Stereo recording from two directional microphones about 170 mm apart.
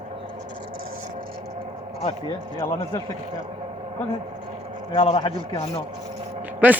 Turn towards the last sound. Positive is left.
turn(degrees=-10)  # may be behind; listen again after turning